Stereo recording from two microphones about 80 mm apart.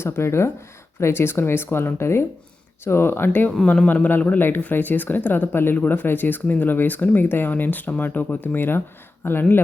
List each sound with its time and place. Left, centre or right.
0.0 s speech: left
3.7 s a man's voice: centre